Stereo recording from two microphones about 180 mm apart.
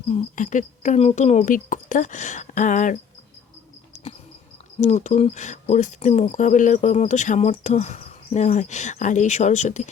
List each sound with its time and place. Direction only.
0.1 s speech: 45° left (ahead or behind)
4.8 s speech: 40° left (ahead or behind)